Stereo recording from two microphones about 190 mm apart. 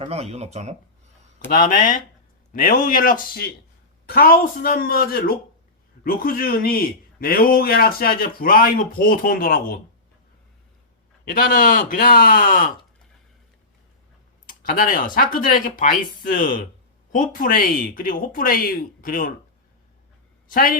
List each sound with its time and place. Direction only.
0.0 s speech: 35° right (ahead or behind)
1.5 s a man's voice: 45° left (ahead or behind)
11.3 s a man's voice: 50° left (ahead or behind)
14.4 s a man's voice: 50° left (ahead or behind)
20.5 s a man's voice: 50° left (ahead or behind)